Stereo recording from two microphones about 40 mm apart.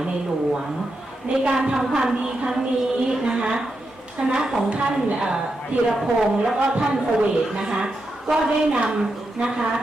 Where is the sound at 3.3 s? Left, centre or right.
Centre.